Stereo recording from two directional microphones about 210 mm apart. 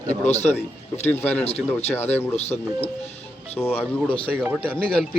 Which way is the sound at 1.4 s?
30° left (ahead or behind).